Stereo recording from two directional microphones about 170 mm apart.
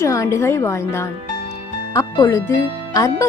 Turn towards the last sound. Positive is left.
turn(degrees=20)  # may be behind; listen again after turning